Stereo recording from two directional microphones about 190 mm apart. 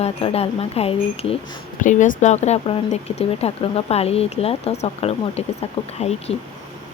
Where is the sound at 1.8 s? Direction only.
40° left (ahead or behind).